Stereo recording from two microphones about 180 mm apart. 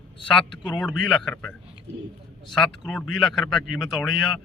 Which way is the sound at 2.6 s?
5° left (ahead or behind).